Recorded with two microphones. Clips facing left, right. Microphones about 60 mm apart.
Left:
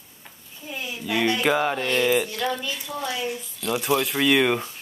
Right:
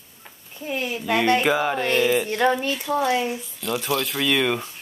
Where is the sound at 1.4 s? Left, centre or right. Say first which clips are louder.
Right 1 dB; centre.